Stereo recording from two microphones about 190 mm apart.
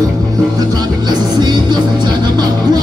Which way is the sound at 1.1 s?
20° right (ahead or behind).